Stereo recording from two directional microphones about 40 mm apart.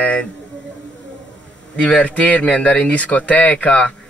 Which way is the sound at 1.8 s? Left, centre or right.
Left.